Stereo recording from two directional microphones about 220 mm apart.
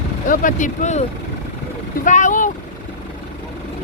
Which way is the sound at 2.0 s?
35° left (ahead or behind).